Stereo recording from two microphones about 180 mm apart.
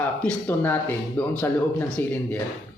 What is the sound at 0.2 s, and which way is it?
A man's voice, 10° left (ahead or behind).